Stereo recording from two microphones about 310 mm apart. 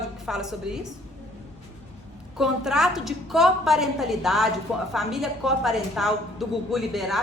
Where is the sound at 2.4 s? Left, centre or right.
Centre.